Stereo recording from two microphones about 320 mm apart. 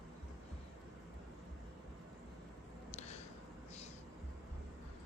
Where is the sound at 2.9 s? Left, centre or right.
Left.